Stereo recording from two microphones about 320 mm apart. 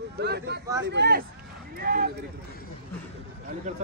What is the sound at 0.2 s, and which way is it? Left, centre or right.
Speech, right.